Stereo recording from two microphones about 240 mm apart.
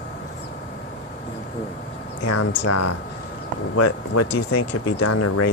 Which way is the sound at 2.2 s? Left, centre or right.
Left.